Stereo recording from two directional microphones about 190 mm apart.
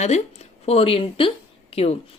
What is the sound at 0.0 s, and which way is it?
A woman's voice, 35° left (ahead or behind).